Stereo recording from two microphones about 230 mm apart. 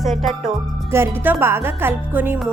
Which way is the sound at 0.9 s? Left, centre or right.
Centre.